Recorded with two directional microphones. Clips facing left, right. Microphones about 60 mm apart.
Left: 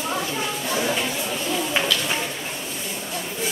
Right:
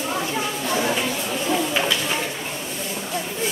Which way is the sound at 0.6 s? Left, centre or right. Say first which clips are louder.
Right 2 dB; centre.